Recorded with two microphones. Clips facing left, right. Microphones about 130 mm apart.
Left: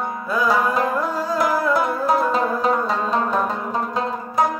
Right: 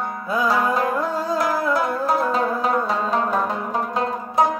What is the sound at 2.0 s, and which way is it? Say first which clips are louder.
Music: left 1 dB; centre (ahead or behind).